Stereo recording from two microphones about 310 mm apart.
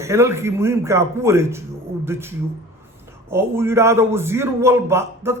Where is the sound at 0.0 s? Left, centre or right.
Centre.